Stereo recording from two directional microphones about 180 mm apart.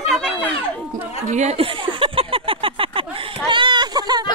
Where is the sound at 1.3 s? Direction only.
40° right (ahead or behind); by 4.2 s 20° right (ahead or behind).